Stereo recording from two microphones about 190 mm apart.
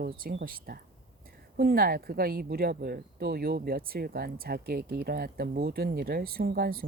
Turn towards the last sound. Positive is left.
turn(degrees=-50)  # may be behind; listen again after turning